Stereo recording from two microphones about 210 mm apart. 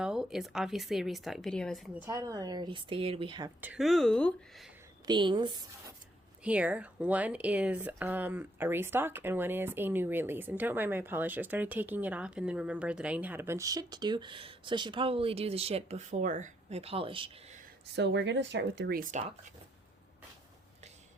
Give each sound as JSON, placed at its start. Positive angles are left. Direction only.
{"t": 0.0, "sound": "a woman's voice", "side_deg": -5}
{"t": 3.6, "sound": "a woman's voice", "side_deg": -5}
{"t": 5.0, "sound": "speech", "side_deg": -20}
{"t": 6.4, "sound": "speech", "side_deg": -5}
{"t": 17.9, "sound": "speech", "side_deg": -55}